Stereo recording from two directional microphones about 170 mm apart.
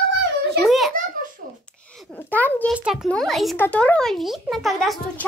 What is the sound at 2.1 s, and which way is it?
Speech, 10° left (ahead or behind).